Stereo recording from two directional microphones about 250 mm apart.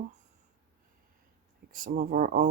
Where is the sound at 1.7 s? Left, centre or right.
Right.